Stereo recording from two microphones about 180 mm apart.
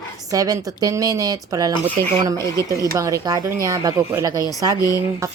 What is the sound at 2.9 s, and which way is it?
Speech, 20° right (ahead or behind).